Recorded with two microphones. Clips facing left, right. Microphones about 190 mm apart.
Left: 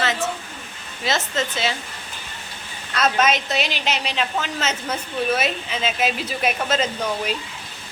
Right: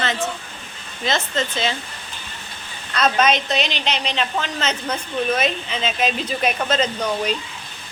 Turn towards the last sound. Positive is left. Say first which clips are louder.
# right 2 dB
turn(degrees=5)  # may be behind; listen again after turning